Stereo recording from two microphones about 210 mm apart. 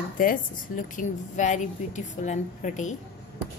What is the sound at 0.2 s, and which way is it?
A woman's voice, 40° left (ahead or behind).